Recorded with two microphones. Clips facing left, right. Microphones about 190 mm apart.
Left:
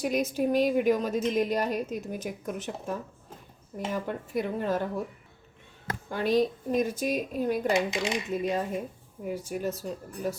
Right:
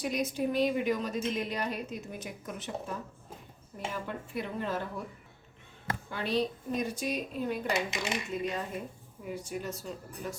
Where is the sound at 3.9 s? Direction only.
45° left (ahead or behind).